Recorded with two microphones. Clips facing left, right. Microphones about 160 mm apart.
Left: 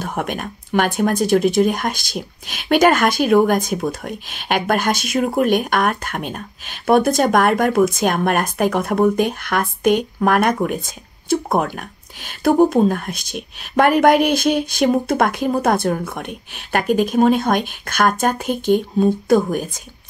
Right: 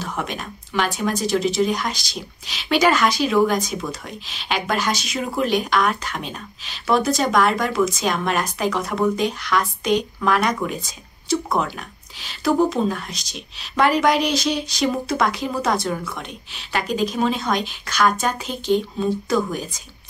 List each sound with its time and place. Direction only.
0.0 s speech: 50° left (ahead or behind)